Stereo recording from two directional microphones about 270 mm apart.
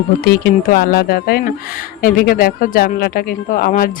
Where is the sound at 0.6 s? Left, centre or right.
Left.